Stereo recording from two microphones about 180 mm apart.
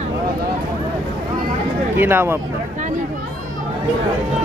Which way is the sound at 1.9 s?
10° right (ahead or behind).